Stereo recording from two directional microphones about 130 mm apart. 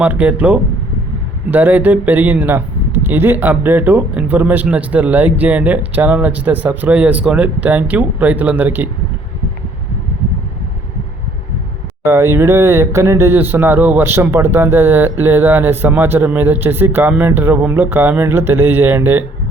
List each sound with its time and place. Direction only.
0.0 s speech: 10° right (ahead or behind)
12.0 s speech: 20° right (ahead or behind)